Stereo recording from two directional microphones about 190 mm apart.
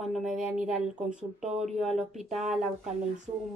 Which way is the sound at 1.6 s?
Centre (ahead or behind).